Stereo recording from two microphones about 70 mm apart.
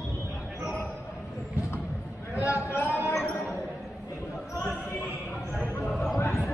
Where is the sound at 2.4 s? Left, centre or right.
Left.